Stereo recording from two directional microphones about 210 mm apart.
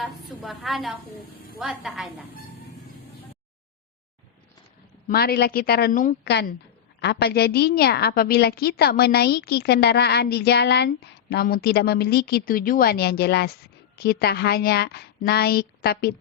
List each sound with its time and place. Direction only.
0.0 s a woman's voice: centre (ahead or behind)
5.0 s a woman's voice: 45° left (ahead or behind)